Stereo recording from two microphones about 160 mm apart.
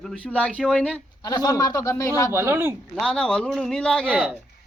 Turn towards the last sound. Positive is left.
turn(degrees=5)  # may be behind; listen again after turning